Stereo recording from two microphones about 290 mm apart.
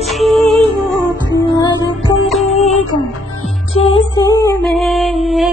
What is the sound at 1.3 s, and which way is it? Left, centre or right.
Music, centre.